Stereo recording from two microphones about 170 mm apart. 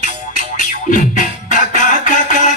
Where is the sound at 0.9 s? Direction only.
50° left (ahead or behind).